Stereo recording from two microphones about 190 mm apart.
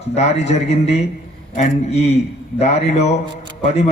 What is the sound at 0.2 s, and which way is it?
A man's voice, 35° left (ahead or behind).